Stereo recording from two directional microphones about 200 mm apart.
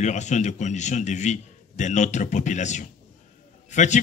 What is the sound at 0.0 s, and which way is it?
A man's voice, 35° left (ahead or behind).